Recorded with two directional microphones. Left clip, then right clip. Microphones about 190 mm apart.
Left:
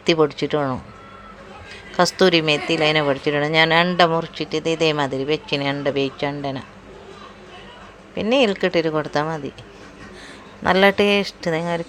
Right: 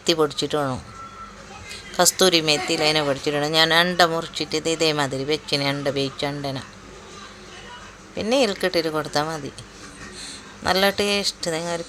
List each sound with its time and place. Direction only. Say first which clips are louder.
0.0 s a woman's voice: left 3 dB; 15° left (ahead or behind)
8.1 s a woman's voice: left 3 dB; 15° left (ahead or behind)
10.6 s speech: left 4 dB; 20° left (ahead or behind)